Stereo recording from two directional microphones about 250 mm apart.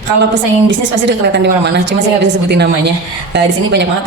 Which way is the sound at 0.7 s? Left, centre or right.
Right.